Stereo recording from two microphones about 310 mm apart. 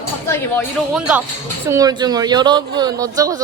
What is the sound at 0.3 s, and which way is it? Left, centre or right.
Speech, centre.